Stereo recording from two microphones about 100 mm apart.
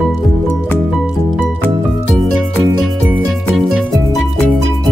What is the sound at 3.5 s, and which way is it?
Music, 5° right (ahead or behind).